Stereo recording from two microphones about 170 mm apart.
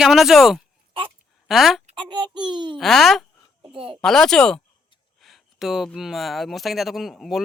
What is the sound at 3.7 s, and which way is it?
Speech, 30° right (ahead or behind).